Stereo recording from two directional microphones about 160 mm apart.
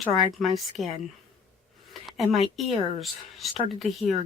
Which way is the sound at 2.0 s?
Centre (ahead or behind).